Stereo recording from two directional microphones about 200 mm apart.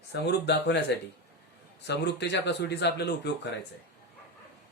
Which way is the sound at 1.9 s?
60° left (ahead or behind).